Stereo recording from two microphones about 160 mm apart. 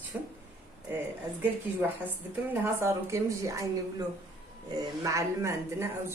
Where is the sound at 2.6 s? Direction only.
15° right (ahead or behind).